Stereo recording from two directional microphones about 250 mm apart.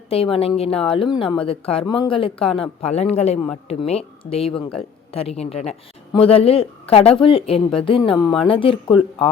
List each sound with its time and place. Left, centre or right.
0.1 s speech: left
8.1 s speech: centre
8.4 s speech: left